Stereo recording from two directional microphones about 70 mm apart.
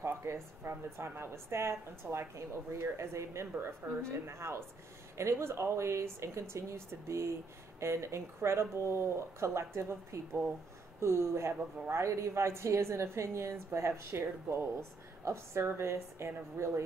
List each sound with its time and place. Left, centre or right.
0.0 s a woman's voice: right